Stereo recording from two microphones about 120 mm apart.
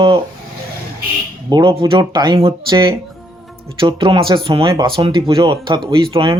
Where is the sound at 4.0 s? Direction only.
50° right (ahead or behind).